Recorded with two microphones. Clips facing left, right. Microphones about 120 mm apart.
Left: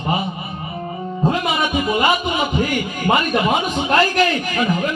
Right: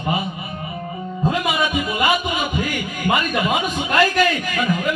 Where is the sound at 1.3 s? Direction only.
25° left (ahead or behind).